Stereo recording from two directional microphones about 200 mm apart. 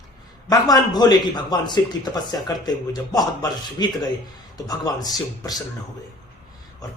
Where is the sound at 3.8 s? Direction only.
20° left (ahead or behind).